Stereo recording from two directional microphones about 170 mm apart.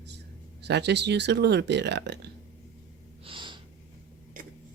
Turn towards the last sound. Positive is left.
turn(degrees=-30)  # may be behind; listen again after turning